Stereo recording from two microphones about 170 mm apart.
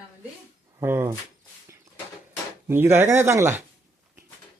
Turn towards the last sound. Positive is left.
turn(degrees=-15)  # may be behind; listen again after turning